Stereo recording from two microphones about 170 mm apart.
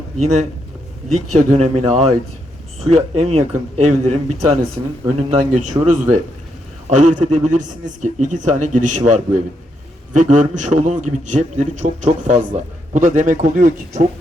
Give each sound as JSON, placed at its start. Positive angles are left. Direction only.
{"t": 0.2, "sound": "a man's voice", "side_deg": -40}